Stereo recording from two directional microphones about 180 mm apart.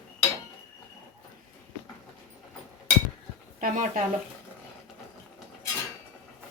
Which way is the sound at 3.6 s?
45° right (ahead or behind).